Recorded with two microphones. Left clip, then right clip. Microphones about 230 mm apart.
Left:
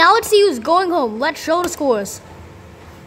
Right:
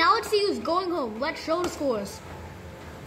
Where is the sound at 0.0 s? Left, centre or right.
Left.